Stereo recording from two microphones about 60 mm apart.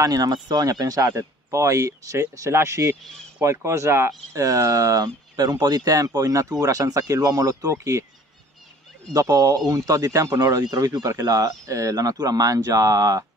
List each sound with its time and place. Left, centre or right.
0.0 s speech: right
1.1 s speech: right
2.5 s speech: right
4.3 s speech: right
6.6 s speech: right
9.1 s speech: right